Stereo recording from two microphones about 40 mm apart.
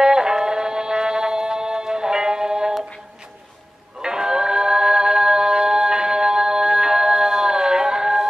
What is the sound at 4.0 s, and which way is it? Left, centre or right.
Singing, centre.